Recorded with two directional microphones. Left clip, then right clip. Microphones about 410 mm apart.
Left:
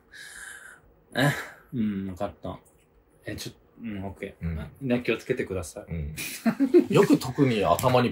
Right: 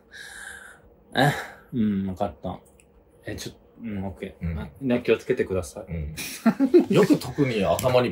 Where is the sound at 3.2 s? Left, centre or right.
Centre.